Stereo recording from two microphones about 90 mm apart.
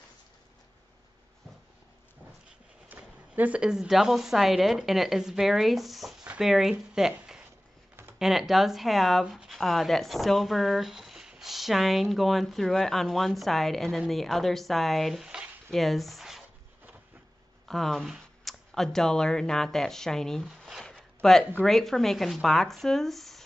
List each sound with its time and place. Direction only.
2.9 s speech: 20° right (ahead or behind)
15.7 s speech: centre (ahead or behind)
17.6 s speech: 5° left (ahead or behind)
20.4 s zipper: 5° right (ahead or behind)
21.2 s speech: 5° left (ahead or behind)